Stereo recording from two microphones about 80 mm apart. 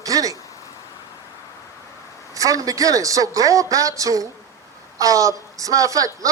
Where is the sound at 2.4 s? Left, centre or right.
Right.